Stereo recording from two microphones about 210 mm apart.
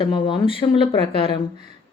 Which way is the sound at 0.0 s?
25° left (ahead or behind).